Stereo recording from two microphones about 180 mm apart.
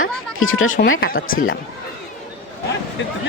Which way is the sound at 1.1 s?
50° left (ahead or behind).